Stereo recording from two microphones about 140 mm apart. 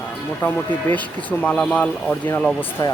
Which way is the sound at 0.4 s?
15° left (ahead or behind).